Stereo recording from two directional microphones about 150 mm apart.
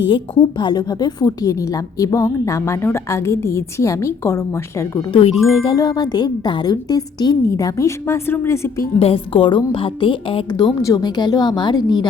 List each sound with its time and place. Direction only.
0.1 s a woman's voice: 35° left (ahead or behind)
5.4 s a woman's voice: 30° left (ahead or behind)
9.0 s a woman's voice: 40° left (ahead or behind)